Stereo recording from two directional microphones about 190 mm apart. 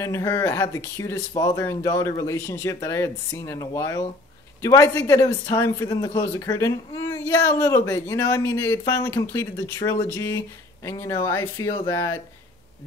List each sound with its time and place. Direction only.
0.0 s speech: 15° left (ahead or behind)